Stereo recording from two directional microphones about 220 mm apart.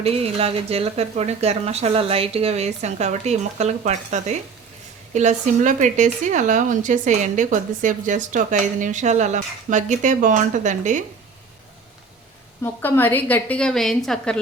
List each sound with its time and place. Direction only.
0.0 s a woman's voice: 25° right (ahead or behind)
12.6 s a woman's voice: 10° left (ahead or behind)